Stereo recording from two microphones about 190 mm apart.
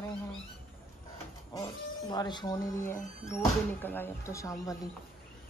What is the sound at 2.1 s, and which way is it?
Speech, 20° left (ahead or behind).